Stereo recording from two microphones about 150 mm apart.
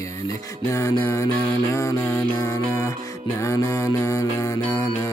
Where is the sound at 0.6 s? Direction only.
20° left (ahead or behind).